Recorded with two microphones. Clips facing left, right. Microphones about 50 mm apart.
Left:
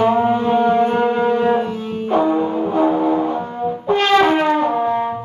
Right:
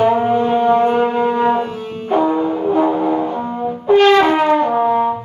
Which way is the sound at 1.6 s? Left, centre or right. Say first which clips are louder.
Left 1 dB; right.